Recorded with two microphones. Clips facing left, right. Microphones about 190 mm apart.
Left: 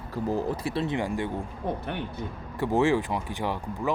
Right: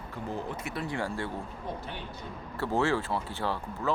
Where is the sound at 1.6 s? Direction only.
60° left (ahead or behind).